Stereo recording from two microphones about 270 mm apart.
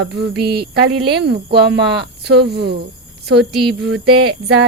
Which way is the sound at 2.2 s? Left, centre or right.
Right.